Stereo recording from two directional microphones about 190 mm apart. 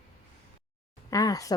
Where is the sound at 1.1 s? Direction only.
20° left (ahead or behind).